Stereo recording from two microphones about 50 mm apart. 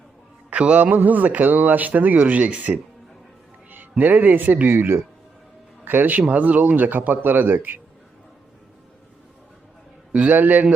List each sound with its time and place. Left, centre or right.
0.5 s music: right
0.8 s speech: right
10.1 s speech: right